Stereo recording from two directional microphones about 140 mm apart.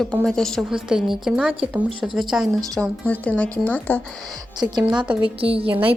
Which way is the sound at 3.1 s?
10° left (ahead or behind).